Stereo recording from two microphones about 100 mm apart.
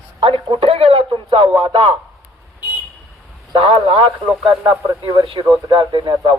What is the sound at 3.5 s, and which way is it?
Speech, 65° right (ahead or behind).